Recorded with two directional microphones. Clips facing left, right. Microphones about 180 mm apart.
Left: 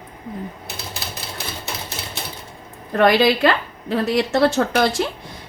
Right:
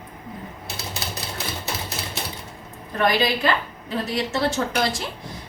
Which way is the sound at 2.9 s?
65° left (ahead or behind).